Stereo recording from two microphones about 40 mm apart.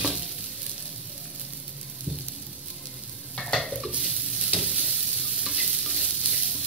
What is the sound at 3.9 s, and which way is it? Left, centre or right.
Stir, right.